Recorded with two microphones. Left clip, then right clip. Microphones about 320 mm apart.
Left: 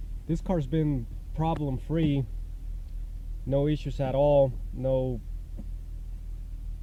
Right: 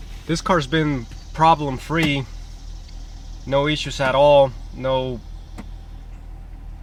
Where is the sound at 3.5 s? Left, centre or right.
Centre.